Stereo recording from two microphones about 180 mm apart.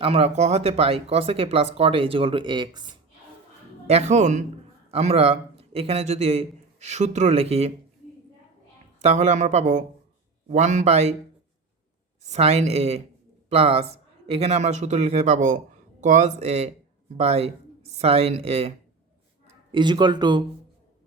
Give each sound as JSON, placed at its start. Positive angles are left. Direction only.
{"t": 0.0, "sound": "speech", "side_deg": -35}
{"t": 3.8, "sound": "a man's voice", "side_deg": -40}
{"t": 9.0, "sound": "speech", "side_deg": -40}
{"t": 12.2, "sound": "a man's voice", "side_deg": -35}